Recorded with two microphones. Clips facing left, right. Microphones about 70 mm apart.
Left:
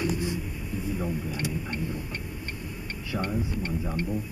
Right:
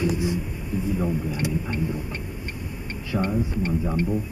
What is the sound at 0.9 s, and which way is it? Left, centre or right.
Speech, centre.